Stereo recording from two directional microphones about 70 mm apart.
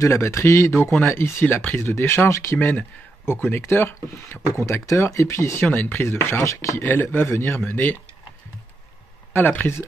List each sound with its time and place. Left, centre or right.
0.0 s speech: left
5.7 s speech: left
6.8 s speech: left
9.3 s speech: left